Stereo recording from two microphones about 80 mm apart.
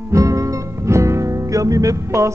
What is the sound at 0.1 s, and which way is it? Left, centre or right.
Music, right.